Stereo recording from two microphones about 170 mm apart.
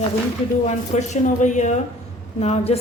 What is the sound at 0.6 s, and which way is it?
A woman's voice, 45° left (ahead or behind).